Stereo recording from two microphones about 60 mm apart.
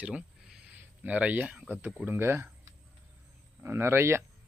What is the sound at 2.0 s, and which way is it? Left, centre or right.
Speech, right.